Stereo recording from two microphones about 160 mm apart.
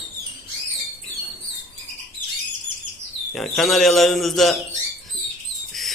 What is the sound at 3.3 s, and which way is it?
Speech, centre (ahead or behind).